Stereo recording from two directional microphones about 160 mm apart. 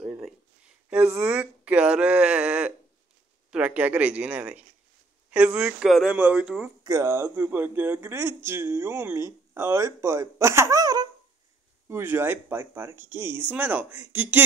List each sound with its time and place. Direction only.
0.0 s a sound: 5° right (ahead or behind)
0.8 s speech: 15° right (ahead or behind)
6.8 s speech: 20° right (ahead or behind)